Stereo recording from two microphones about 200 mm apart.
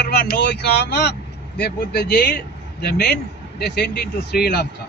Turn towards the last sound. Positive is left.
turn(degrees=55)  # may be behind; listen again after turning